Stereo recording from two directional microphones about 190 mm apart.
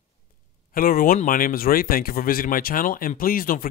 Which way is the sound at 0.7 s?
50° left (ahead or behind).